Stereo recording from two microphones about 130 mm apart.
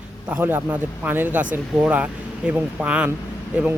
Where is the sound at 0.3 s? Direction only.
15° right (ahead or behind).